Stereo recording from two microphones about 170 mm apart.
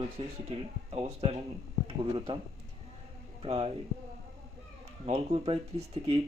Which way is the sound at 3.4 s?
35° right (ahead or behind).